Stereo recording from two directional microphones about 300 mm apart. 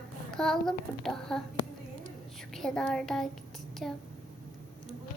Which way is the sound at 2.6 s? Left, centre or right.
Centre.